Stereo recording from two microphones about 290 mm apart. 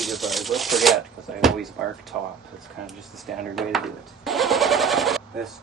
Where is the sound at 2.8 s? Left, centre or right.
Centre.